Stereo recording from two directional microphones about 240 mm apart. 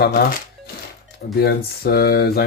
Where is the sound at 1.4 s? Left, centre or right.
Left.